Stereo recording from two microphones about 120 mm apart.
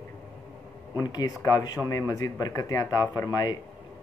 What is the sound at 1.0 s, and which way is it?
Speech, 35° left (ahead or behind).